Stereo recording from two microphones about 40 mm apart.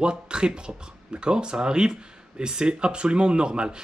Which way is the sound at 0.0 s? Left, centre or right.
Right.